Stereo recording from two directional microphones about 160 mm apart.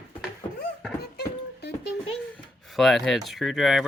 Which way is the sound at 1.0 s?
80° left.